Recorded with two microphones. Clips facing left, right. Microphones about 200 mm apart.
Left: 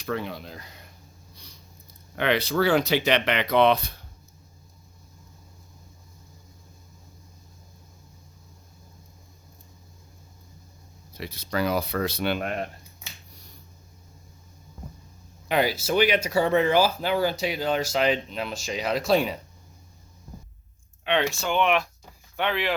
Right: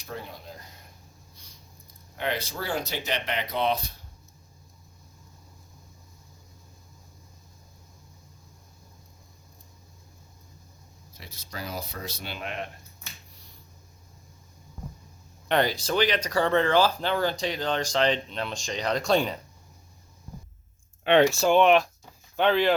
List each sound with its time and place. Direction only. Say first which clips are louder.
0.0 s speech: left 8 dB; 80° left
2.1 s speech: left 8 dB; 80° left; by 3.9 s 65° left (ahead or behind)
11.2 s speech: left 12 dB; 70° left (ahead or behind); by 12.6 s 50° left (ahead or behind)
15.4 s speech: left 1 dB; 5° left (ahead or behind)
21.0 s speech: right 6 dB; 45° right (ahead or behind)